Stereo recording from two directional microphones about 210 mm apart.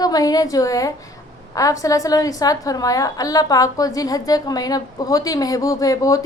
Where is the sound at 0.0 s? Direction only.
20° left (ahead or behind).